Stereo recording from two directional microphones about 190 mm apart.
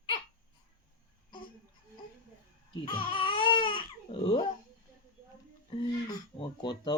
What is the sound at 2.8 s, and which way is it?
Baby cry, 25° left (ahead or behind).